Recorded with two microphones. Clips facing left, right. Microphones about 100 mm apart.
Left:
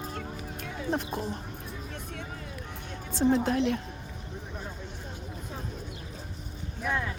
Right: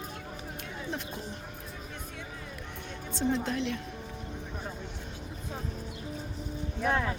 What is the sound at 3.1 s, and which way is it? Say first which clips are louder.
Speech: left 5 dB; 50° left (ahead or behind).